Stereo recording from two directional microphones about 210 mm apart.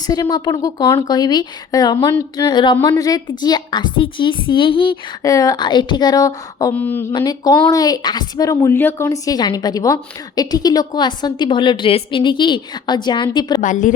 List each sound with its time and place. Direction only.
0.1 s a woman's voice: 20° left (ahead or behind)
13.6 s a woman's voice: 40° left (ahead or behind)